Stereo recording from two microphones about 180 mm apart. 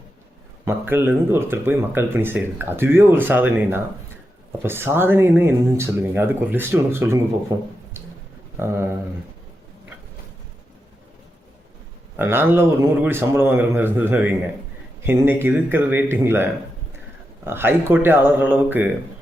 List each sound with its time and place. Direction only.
0.6 s speech: 10° right (ahead or behind)
12.1 s speech: 10° right (ahead or behind)